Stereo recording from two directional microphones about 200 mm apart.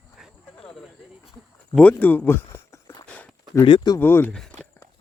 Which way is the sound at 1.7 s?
5° left (ahead or behind).